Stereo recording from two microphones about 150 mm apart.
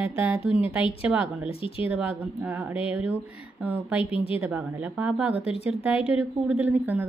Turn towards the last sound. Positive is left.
turn(degrees=-10)  # may be behind; listen again after turning